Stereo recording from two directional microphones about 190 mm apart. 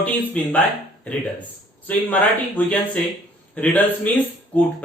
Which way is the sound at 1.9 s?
10° left (ahead or behind).